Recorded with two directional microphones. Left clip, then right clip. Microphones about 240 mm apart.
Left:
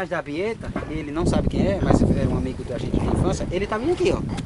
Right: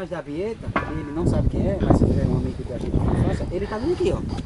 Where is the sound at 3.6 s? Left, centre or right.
Centre.